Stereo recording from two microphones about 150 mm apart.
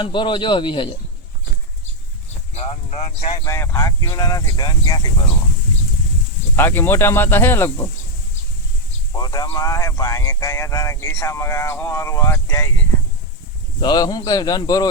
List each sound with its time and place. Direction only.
0.0 s speech: 30° left (ahead or behind)
2.6 s speech: 45° left (ahead or behind)
3.4 s speech: 15° left (ahead or behind)
6.6 s speech: 15° left (ahead or behind)
9.1 s speech: 25° left (ahead or behind)
13.8 s speech: 25° left (ahead or behind)